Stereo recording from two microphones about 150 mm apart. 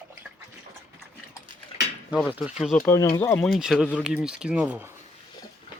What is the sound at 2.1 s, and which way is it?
Speech, 5° right (ahead or behind).